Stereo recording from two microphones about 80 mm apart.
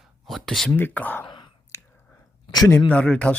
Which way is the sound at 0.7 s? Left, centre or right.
Left.